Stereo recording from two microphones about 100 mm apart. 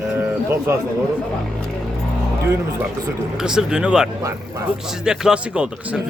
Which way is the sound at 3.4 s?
5° right (ahead or behind).